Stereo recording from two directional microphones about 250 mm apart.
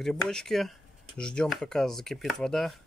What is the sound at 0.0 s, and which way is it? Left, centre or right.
Speech, centre.